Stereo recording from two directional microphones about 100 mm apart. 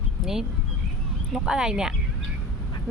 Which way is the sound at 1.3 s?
5° right (ahead or behind).